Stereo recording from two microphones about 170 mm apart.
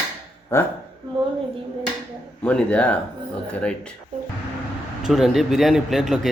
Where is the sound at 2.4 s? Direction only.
5° left (ahead or behind).